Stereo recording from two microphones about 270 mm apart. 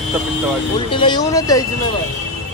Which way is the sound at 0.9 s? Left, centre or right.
Centre.